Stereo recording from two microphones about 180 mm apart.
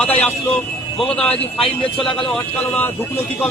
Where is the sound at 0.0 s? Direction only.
10° left (ahead or behind).